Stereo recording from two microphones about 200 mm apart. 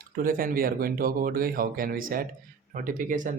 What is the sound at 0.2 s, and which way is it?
Speech, 45° right (ahead or behind).